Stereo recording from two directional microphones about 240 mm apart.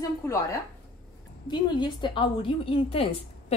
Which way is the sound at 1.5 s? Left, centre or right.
Centre.